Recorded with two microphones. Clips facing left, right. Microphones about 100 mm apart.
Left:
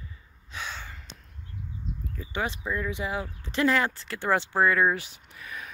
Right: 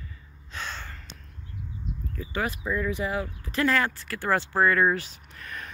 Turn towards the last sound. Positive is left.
turn(degrees=10)  # may be behind; listen again after turning